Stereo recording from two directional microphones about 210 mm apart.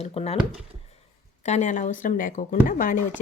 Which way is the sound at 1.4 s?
35° left (ahead or behind).